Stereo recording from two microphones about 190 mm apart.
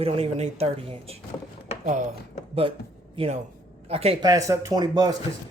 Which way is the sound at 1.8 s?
40° right (ahead or behind).